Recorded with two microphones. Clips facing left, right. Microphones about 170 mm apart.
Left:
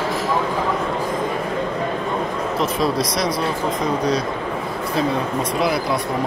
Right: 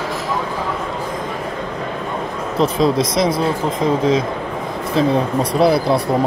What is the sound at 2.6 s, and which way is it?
Speech, 25° right (ahead or behind).